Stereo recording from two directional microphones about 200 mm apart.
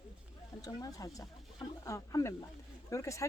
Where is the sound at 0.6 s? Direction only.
15° left (ahead or behind).